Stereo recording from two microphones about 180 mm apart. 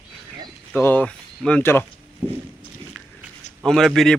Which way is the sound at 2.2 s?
40° right (ahead or behind).